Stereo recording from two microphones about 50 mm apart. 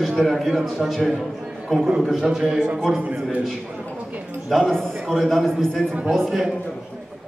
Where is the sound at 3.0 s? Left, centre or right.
Right.